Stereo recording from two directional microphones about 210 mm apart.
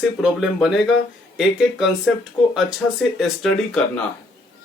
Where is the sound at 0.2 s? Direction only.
Centre (ahead or behind).